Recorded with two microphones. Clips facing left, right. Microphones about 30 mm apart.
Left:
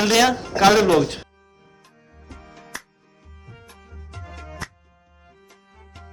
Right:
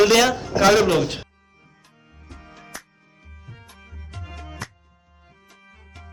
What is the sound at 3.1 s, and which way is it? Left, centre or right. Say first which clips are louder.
Music: right 1 dB; right.